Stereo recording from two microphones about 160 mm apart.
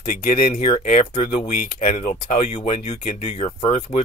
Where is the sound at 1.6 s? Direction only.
55° left (ahead or behind).